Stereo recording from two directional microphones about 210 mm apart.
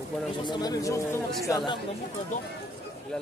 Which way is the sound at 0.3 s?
20° left (ahead or behind).